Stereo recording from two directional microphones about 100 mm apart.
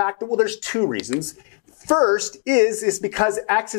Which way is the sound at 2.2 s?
5° right (ahead or behind).